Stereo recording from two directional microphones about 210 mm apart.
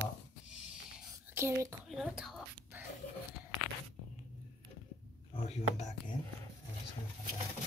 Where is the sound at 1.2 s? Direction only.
10° right (ahead or behind).